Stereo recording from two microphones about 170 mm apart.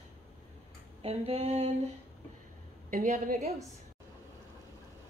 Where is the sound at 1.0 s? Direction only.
35° right (ahead or behind).